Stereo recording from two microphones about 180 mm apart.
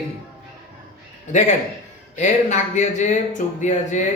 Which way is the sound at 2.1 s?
40° left (ahead or behind).